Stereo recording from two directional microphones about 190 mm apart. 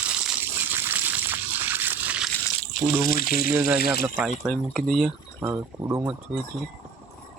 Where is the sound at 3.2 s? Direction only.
50° left (ahead or behind).